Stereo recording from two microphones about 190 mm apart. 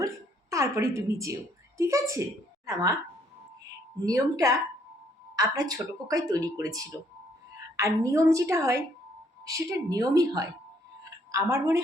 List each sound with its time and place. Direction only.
0.5 s a woman's voice: 15° right (ahead or behind)
4.0 s a woman's voice: 15° right (ahead or behind)